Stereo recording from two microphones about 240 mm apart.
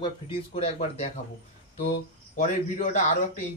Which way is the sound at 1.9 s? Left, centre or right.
Left.